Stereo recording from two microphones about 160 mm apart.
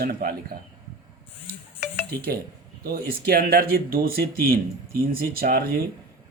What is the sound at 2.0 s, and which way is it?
Speech, 75° right (ahead or behind).